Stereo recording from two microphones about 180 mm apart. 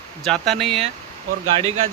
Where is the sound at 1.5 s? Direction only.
35° right (ahead or behind).